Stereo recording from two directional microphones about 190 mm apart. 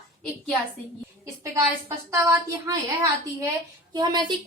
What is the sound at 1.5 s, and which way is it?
A woman's voice, 15° right (ahead or behind).